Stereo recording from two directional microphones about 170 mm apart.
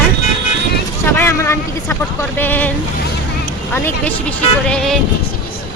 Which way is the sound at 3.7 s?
10° left (ahead or behind).